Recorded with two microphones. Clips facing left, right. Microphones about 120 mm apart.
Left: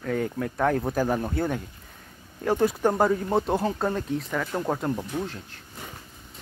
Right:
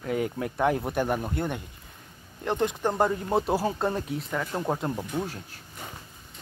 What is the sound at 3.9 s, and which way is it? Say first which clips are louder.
Speech: left 2 dB; 20° right (ahead or behind).